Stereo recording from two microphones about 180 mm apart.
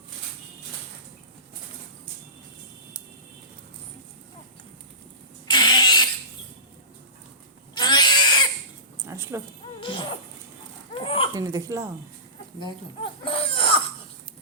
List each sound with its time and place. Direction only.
5.5 s vehicle: 25° left (ahead or behind)
7.8 s cat: 25° left (ahead or behind)
9.0 s a sound: 15° right (ahead or behind)
9.8 s a sound: 30° left (ahead or behind)
10.9 s laughter: 30° left (ahead or behind)
11.3 s speech: 20° right (ahead or behind)
12.5 s speech: 25° left (ahead or behind)